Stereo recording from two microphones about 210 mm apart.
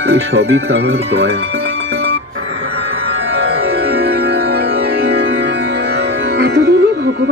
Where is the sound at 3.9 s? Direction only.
50° right (ahead or behind).